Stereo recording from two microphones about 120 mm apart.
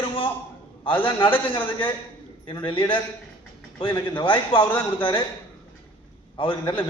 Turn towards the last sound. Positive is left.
turn(degrees=45)  # may be behind; listen again after turning